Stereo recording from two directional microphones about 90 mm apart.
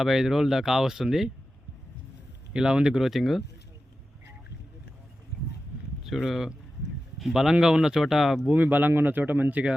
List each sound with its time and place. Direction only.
0.0 s speech: 5° right (ahead or behind)
2.5 s speech: 10° right (ahead or behind)
6.0 s speech: 5° right (ahead or behind)
8.5 s speech: 20° right (ahead or behind)